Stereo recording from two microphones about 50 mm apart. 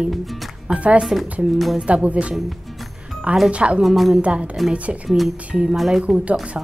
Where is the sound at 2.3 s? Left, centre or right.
Centre.